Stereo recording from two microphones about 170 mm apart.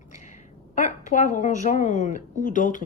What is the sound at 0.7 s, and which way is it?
A woman's voice, 45° left (ahead or behind).